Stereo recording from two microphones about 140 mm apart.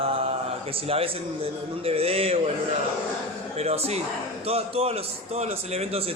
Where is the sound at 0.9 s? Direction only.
45° right (ahead or behind).